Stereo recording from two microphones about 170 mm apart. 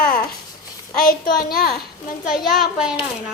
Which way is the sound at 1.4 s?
60° left (ahead or behind).